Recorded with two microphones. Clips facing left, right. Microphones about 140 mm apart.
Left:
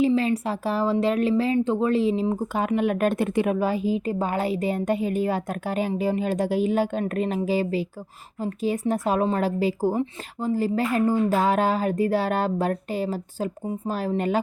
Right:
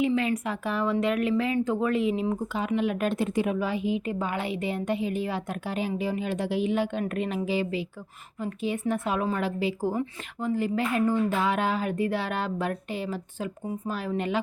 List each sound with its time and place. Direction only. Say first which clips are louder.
0.0 s speech: left 4 dB; 30° left (ahead or behind)
2.5 s a woman's voice: left 4 dB; 50° left (ahead or behind)